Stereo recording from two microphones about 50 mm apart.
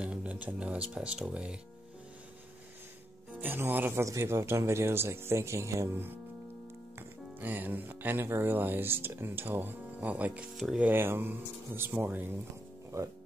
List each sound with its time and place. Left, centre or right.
0.0 s speech: right
3.3 s speech: right
4.0 s speech: right
7.0 s music: right
8.3 s speech: right
10.0 s speech: right
10.9 s speech: right
12.9 s speech: right